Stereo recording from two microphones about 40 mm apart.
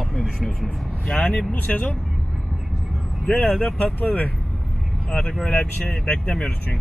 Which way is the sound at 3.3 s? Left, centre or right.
Left.